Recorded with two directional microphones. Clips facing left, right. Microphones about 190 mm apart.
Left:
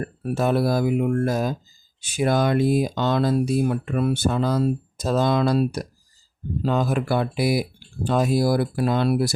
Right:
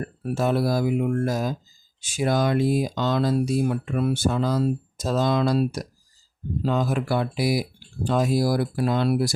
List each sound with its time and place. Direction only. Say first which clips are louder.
0.3 s speech: left 2 dB; 55° left (ahead or behind)